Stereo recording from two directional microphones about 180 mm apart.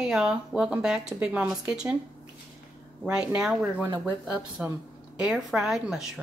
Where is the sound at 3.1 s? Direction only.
5° right (ahead or behind).